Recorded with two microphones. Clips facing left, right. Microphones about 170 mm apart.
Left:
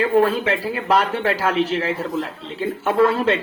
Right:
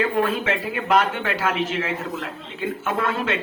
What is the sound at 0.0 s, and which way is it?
Speech, 35° left (ahead or behind).